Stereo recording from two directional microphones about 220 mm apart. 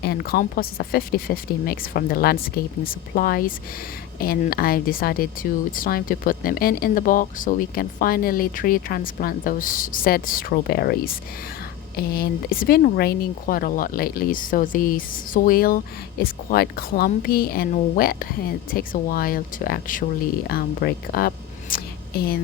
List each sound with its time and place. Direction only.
0.0 s speech: 45° left (ahead or behind)